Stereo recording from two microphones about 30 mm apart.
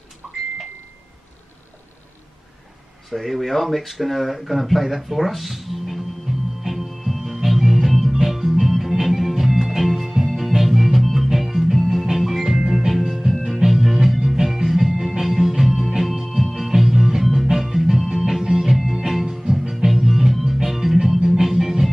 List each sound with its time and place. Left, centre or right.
0.2 s a sound: centre
3.1 s speech: centre
6.7 s music: centre
13.4 s music: centre
13.7 s music: centre
19.4 s music: centre
19.9 s music: centre